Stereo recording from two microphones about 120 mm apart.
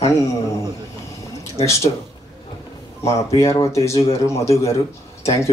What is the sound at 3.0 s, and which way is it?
Speech, 25° left (ahead or behind).